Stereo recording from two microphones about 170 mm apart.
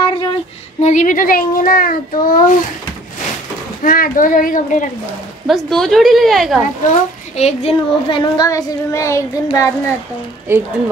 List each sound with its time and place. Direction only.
0.0 s female singing: 25° left (ahead or behind)
0.8 s a child's voice: 50° left (ahead or behind)
3.8 s a child's voice: 55° left (ahead or behind)
5.5 s a woman's voice: centre (ahead or behind)
6.9 s a child's voice: 40° left (ahead or behind); by 9.7 s 20° left (ahead or behind)
10.5 s a woman's voice: 15° right (ahead or behind)